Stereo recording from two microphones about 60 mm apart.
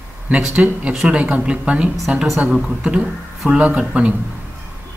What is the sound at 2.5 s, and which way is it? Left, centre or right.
Speech, centre.